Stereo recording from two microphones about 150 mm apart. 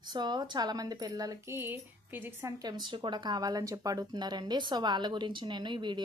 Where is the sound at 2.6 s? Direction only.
30° right (ahead or behind).